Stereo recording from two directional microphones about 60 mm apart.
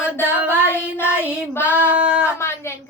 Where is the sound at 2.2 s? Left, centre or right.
Left.